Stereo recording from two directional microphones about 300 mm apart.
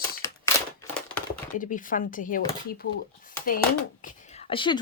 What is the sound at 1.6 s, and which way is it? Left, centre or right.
Speech, left.